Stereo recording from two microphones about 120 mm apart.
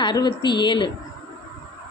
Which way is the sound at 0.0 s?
40° left (ahead or behind).